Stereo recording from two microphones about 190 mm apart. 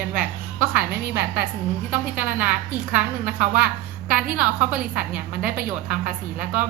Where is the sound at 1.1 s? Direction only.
60° right (ahead or behind).